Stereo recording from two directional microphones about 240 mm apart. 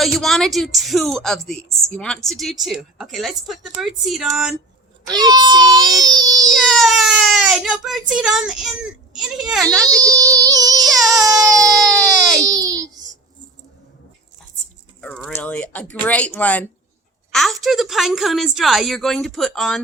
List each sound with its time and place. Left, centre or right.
0.0 s a woman's voice: centre
5.0 s a child's voice: centre
6.7 s baby cry: centre
9.1 s a woman's voice: centre
9.7 s a child's voice: centre
10.9 s baby cry: centre
11.3 s baby cry: centre
11.8 s baby cry: centre
12.4 s baby cry: centre
15.0 s a woman's voice: centre